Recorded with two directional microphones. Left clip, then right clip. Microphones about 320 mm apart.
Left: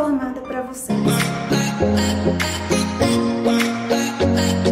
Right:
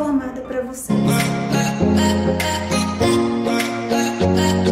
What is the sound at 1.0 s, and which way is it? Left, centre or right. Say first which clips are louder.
Music: even; centre.